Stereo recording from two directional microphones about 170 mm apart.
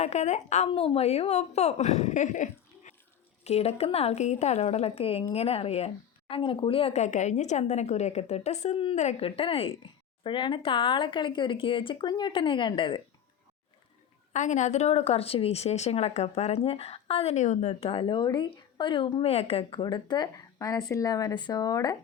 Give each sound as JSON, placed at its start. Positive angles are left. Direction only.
{"t": 0.0, "sound": "speech", "side_deg": 40}
{"t": 0.7, "sound": "speech", "side_deg": 30}
{"t": 14.3, "sound": "speech", "side_deg": 45}